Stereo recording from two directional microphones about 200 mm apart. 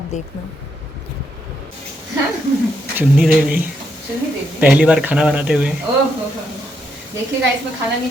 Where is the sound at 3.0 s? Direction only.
5° right (ahead or behind).